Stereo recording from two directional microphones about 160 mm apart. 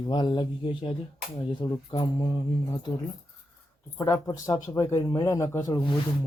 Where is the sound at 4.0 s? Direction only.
20° left (ahead or behind).